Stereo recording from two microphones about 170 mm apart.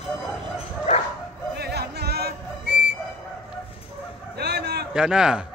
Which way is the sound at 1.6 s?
70° right (ahead or behind).